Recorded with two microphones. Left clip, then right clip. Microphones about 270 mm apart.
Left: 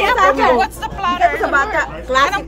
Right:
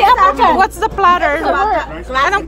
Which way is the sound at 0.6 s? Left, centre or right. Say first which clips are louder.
Right 6 dB; centre.